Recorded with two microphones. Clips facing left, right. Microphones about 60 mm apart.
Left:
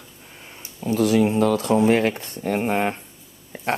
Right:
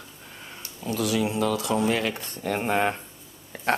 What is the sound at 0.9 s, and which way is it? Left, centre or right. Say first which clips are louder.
Speech: left 7 dB; left.